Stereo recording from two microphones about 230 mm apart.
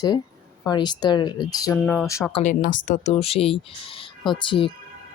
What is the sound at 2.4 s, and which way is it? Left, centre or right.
Speech, left.